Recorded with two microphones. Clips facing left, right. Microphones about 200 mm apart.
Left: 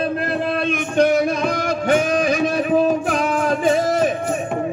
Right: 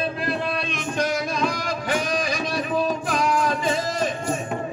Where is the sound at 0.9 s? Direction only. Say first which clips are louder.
Left 9 dB; 55° left (ahead or behind).